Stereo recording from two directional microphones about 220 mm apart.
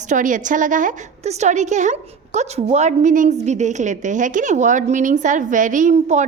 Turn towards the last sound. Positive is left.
turn(degrees=-30)  # may be behind; listen again after turning